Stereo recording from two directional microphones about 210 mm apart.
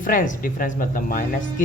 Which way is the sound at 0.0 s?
40° left (ahead or behind).